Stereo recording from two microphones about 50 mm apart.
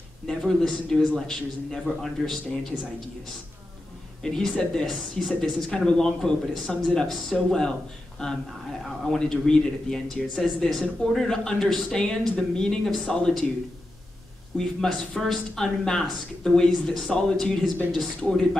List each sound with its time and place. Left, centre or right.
0.3 s speech: centre
4.2 s speech: centre
6.7 s speech: centre
9.0 s speech: centre
14.6 s speech: centre